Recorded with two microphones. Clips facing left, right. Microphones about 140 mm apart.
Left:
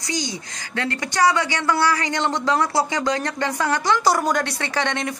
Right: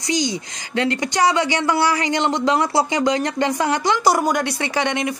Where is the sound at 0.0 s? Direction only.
20° right (ahead or behind).